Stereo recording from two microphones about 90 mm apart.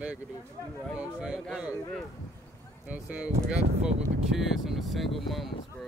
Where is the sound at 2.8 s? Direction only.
15° right (ahead or behind).